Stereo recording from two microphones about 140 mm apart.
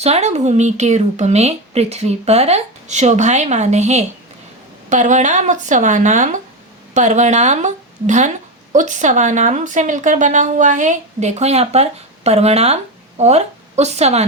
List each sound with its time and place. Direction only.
0.0 s speech: 50° right (ahead or behind)